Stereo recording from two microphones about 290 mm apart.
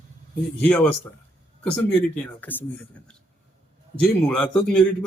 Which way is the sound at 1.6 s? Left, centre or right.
Centre.